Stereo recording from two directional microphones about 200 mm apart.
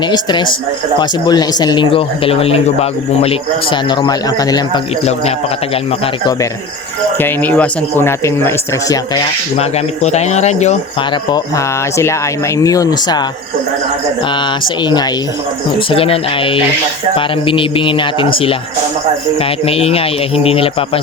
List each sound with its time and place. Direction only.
0.1 s speech: 20° left (ahead or behind)
7.2 s speech: 10° left (ahead or behind)
9.6 s speech: 35° left (ahead or behind)
11.3 s speech: 15° left (ahead or behind)
15.9 s speech: 25° left (ahead or behind)